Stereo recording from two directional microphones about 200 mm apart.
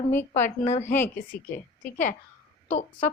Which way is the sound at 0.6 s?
35° left (ahead or behind).